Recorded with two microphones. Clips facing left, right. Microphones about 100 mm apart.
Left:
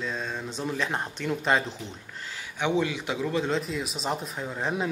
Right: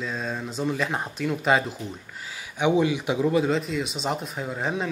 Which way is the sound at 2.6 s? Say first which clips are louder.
Right 5 dB; 15° right (ahead or behind).